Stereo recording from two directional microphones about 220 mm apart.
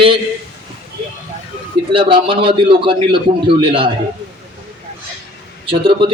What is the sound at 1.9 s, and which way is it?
A man's voice, 25° right (ahead or behind).